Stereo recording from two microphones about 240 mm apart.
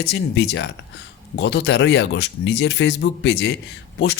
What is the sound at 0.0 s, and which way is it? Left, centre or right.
Speech, left.